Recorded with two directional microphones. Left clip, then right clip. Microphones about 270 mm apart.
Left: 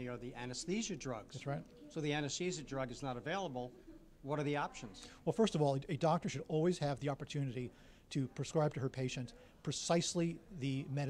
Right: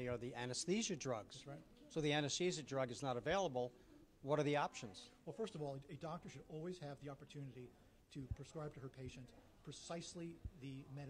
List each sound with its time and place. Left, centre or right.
0.0 s a man's voice: right
5.2 s speech: left